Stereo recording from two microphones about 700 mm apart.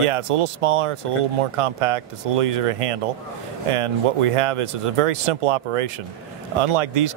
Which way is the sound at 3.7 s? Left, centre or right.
Right.